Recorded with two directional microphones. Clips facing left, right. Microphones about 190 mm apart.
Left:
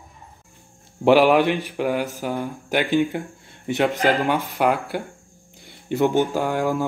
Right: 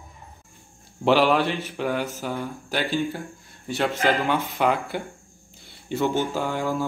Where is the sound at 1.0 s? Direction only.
10° left (ahead or behind).